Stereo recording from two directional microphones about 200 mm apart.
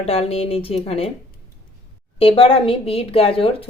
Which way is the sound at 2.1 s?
30° left (ahead or behind).